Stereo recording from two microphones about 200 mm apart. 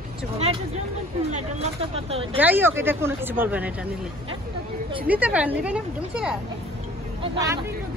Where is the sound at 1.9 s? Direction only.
30° right (ahead or behind).